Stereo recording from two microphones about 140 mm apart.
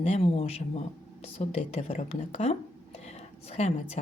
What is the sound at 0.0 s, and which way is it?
A woman's voice, 45° left (ahead or behind).